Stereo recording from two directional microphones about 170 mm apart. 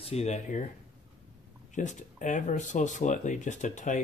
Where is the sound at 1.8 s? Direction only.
45° left (ahead or behind).